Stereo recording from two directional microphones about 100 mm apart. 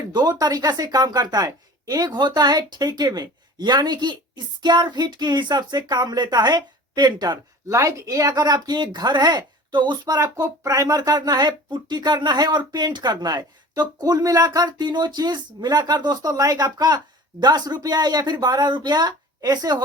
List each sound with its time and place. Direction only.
0.0 s speech: 40° right (ahead or behind)
7.7 s speech: 30° right (ahead or behind)
10.3 s speech: 35° right (ahead or behind)